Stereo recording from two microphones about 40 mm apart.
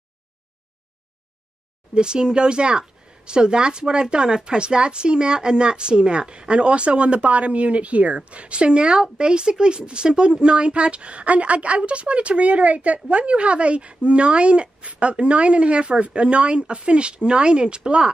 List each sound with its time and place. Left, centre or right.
2.0 s a woman's voice: right